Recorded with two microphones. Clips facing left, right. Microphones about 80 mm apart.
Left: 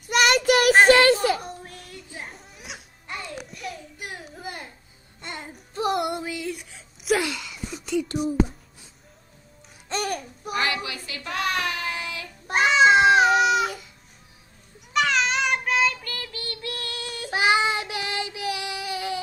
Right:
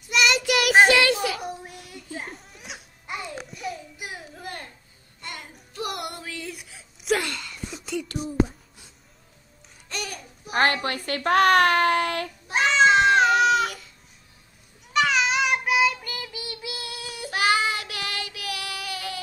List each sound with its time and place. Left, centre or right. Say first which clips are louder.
0.0 s child singing: left 3 dB; left
0.8 s children playing: left 4 dB; left
1.4 s children playing: right 3 dB; centre
3.1 s music: right 1 dB; centre
3.4 s child singing: right 2 dB; centre
5.2 s female singing: left 2 dB; left
6.3 s a sound: left 5 dB; centre
10.0 s babbling: left 8 dB; left
10.5 s child singing: right 4 dB; right
12.5 s cat: left 1 dB; centre
13.0 s baby cry: left 1 dB; centre
14.9 s child singing: right 1 dB; centre
17.3 s child singing: left 2 dB; left